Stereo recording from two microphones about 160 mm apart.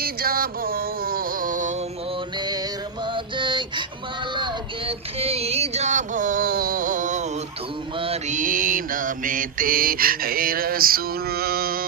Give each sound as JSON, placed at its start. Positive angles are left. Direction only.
{"t": 0.0, "sound": "music", "side_deg": -70}
{"t": 3.1, "sound": "a sound", "side_deg": -30}
{"t": 4.4, "sound": "child singing", "side_deg": -30}
{"t": 7.9, "sound": "mantra", "side_deg": -35}
{"t": 8.3, "sound": "mantra", "side_deg": -55}